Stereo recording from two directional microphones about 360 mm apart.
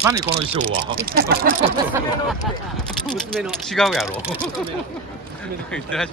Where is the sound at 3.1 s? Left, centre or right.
Centre.